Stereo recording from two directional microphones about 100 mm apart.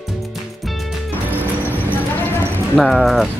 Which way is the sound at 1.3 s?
20° left (ahead or behind).